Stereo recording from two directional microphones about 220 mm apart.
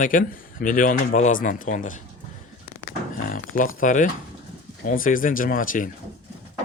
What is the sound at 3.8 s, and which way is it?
Speech, 35° left (ahead or behind).